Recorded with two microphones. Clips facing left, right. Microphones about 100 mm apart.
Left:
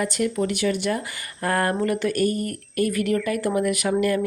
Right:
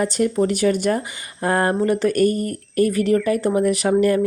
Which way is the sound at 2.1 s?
45° right (ahead or behind).